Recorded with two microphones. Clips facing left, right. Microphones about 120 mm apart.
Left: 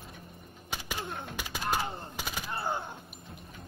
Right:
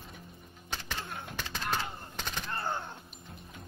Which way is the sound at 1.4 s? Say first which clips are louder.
Left 2 dB; 10° left (ahead or behind).